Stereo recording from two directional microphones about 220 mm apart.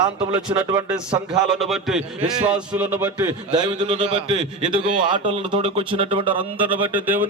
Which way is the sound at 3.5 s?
20° right (ahead or behind).